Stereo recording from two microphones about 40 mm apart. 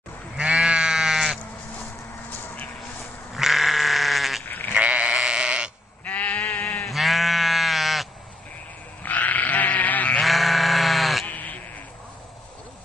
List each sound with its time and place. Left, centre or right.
0.4 s sheep: centre
2.4 s a sound: left
3.3 s goat: centre
4.5 s sheep: left
4.7 s sheep: right
5.1 s sheep: centre
6.0 s sheep: left
6.9 s sheep: centre
9.0 s sheep: left
10.2 s sheep: centre
11.2 s bleat: left